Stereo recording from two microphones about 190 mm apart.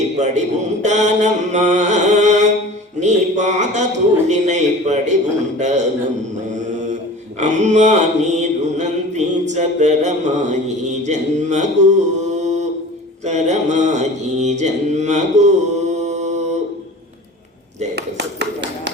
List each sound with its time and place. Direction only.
0.2 s mantra: 40° right (ahead or behind)
7.3 s mantra: 40° right (ahead or behind)
17.9 s a sound: 65° right (ahead or behind)